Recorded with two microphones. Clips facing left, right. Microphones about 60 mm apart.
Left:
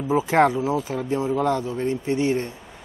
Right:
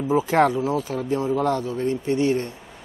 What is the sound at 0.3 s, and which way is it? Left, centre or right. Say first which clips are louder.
Speech: left 2 dB; left.